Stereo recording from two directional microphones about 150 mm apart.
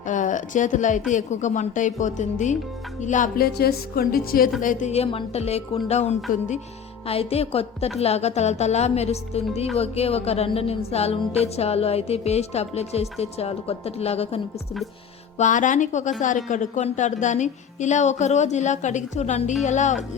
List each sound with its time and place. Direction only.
0.1 s a woman's voice: 55° left (ahead or behind); by 4.5 s 75° left (ahead or behind)
4.6 s speech: 60° left (ahead or behind); by 14.4 s 45° left (ahead or behind)
15.4 s a woman's voice: 55° left (ahead or behind)